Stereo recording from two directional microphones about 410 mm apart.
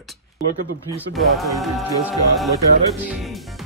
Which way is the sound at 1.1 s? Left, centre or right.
Centre.